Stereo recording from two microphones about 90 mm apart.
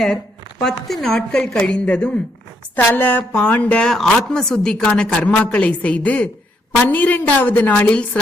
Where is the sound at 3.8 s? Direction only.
5° left (ahead or behind).